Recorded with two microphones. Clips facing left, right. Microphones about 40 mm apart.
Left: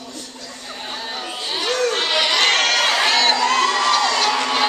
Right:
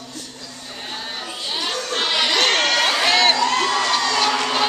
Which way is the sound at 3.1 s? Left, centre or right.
Centre.